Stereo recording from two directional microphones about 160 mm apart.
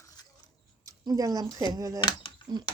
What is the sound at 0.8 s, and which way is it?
Speech, 20° right (ahead or behind).